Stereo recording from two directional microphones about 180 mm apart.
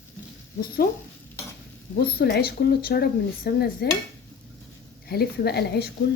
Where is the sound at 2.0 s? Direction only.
60° left (ahead or behind).